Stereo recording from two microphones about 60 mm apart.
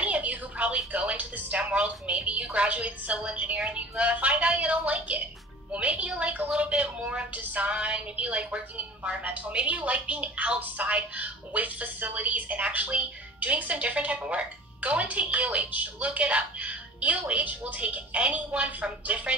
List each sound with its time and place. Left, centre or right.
0.0 s a woman's voice: right